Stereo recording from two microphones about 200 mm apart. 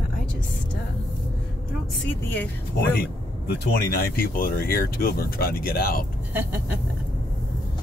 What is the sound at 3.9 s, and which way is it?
Speech, 45° left (ahead or behind).